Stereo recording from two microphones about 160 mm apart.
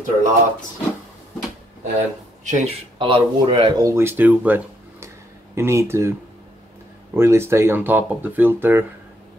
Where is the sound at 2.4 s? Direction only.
45° right (ahead or behind).